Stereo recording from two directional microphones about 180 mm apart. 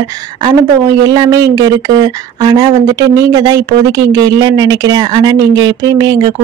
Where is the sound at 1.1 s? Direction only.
20° right (ahead or behind).